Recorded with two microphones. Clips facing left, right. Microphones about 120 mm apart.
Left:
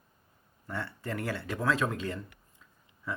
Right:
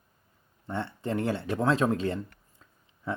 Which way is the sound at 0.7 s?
25° right (ahead or behind).